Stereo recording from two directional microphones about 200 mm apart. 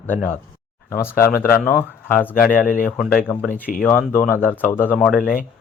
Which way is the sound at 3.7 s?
45° left (ahead or behind).